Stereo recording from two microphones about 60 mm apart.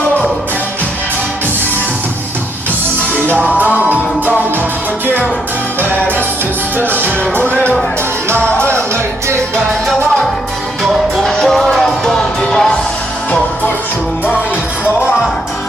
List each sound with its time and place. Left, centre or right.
3.6 s music: right
6.7 s music: right
7.5 s music: left
11.2 s music: centre